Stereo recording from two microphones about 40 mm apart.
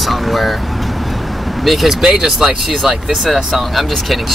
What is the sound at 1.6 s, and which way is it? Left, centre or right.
Speech, centre.